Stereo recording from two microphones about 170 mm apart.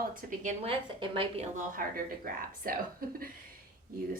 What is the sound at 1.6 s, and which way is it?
A woman's voice, 55° right (ahead or behind).